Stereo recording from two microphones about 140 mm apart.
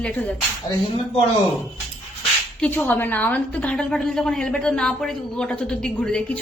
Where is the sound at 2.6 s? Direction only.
10° left (ahead or behind).